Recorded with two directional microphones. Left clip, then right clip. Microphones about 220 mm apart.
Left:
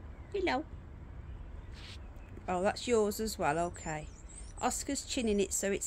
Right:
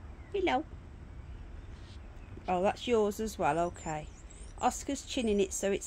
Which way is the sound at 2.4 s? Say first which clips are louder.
Right 2 dB; 20° right (ahead or behind).